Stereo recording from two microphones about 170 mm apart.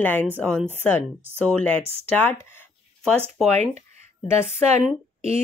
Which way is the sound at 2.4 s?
10° left (ahead or behind).